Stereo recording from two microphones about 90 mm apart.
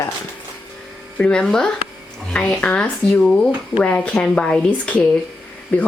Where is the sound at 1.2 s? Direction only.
10° left (ahead or behind).